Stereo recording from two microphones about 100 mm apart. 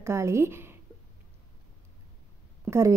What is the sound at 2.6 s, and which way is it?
Speech, 30° right (ahead or behind).